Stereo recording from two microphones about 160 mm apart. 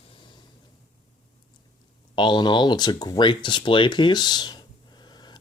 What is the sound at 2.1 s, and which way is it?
Speech, 30° left (ahead or behind).